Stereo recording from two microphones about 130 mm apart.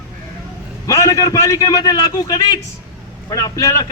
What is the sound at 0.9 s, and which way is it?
A man's voice, 25° left (ahead or behind).